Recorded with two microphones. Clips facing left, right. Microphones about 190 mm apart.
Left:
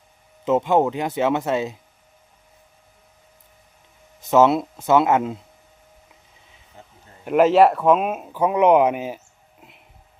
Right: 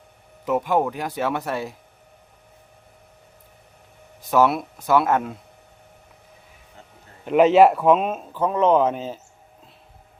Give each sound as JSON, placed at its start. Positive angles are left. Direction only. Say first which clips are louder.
{"t": 0.4, "sound": "speech", "louder": "left 3 dB", "side_deg": 25}
{"t": 4.2, "sound": "speech", "louder": "left 3 dB", "side_deg": 20}
{"t": 7.3, "sound": "speech", "louder": "right 1 dB", "side_deg": 0}